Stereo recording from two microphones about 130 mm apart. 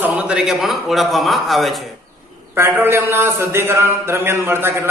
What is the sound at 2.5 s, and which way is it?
A man's voice, 20° right (ahead or behind).